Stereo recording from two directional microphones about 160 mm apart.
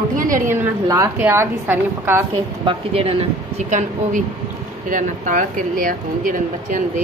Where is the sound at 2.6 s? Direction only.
35° right (ahead or behind).